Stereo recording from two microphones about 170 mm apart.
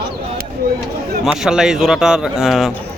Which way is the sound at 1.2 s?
5° right (ahead or behind).